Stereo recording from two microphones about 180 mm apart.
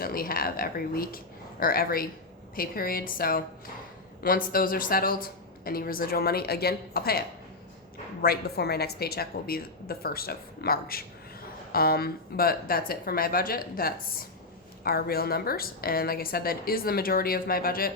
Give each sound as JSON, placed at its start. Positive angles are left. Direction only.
{"t": 0.0, "sound": "a woman's voice", "side_deg": 55}